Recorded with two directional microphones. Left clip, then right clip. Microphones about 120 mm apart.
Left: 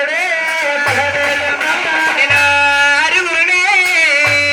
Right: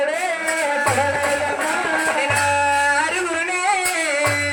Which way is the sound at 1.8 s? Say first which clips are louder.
Left 7 dB; 50° right (ahead or behind).